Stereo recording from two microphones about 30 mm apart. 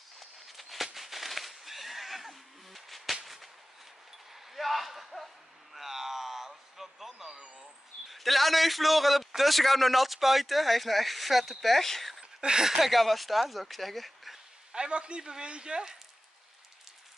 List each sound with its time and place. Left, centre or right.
0.2 s a sound: centre
0.9 s neigh: centre
4.3 s a sound: centre
8.1 s a man's voice: centre
12.4 s speech: right
12.6 s speech: centre
12.9 s a man's voice: centre
14.7 s speech: right